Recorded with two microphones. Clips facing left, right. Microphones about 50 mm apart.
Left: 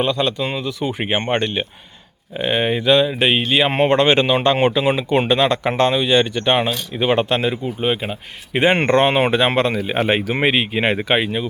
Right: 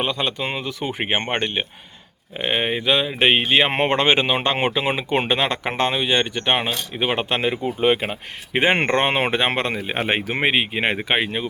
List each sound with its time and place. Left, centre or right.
0.0 s speech: right
1.1 s speech: centre
3.2 s speech: right; by 7.3 s centre
7.3 s speech: right
7.6 s speech: right
8.5 s speech: right